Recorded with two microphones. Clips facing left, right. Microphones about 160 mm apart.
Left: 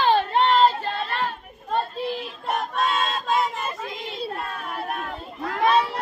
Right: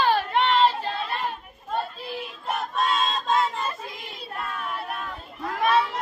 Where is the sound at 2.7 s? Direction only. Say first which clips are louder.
Right 2 dB; centre (ahead or behind).